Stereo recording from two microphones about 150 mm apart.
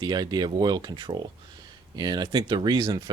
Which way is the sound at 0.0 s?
30° right (ahead or behind).